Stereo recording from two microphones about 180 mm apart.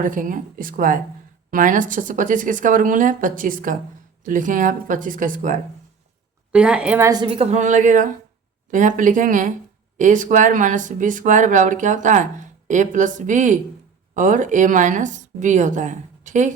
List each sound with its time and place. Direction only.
0.0 s speech: 50° right (ahead or behind)
6.5 s a woman's voice: 5° right (ahead or behind)
7.1 s a woman's voice: 30° right (ahead or behind)